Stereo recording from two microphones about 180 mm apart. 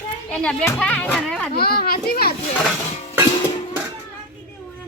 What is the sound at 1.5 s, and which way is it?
Speech, 60° left (ahead or behind).